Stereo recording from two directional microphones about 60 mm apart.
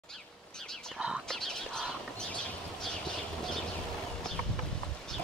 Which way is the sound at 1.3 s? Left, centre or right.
Centre.